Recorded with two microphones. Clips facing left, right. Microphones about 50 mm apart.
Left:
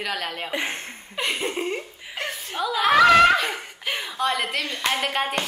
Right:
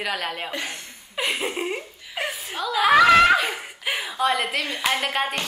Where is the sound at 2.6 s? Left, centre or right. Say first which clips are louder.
Right 1 dB; centre.